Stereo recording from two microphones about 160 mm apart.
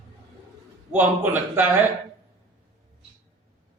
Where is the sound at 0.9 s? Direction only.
10° right (ahead or behind).